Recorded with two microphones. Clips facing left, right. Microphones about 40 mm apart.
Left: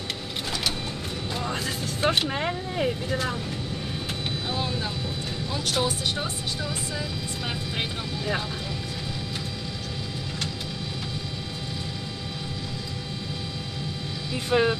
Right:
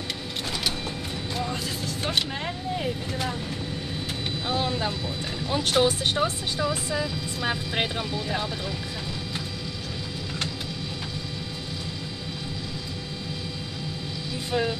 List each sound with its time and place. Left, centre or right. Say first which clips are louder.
2.3 s speech: left 2 dB; left
4.6 s speech: right 5 dB; centre
5.5 s speech: right 5 dB; right
14.5 s speech: left 5 dB; left